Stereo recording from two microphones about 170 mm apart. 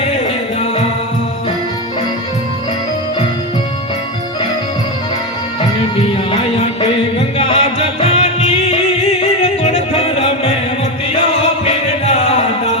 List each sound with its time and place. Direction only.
7.2 s music: 35° left (ahead or behind)